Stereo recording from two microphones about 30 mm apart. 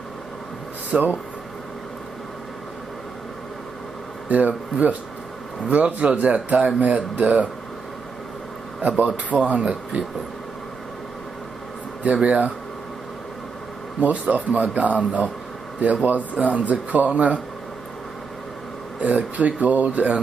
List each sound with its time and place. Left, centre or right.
0.9 s speech: right
4.3 s speech: right
9.0 s speech: right
12.1 s speech: right
14.0 s speech: right
16.0 s speech: right
18.9 s speech: right